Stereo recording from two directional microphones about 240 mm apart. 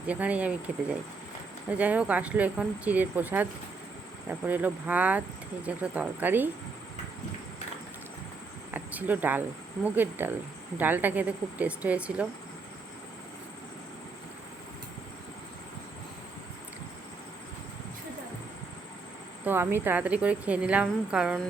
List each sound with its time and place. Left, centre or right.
0.1 s a woman's voice: centre
8.7 s a sound: centre
9.8 s a woman's voice: centre
19.5 s a woman's voice: centre